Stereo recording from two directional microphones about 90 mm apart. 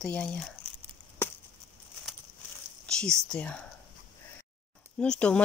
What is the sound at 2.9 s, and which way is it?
Speech, 10° left (ahead or behind).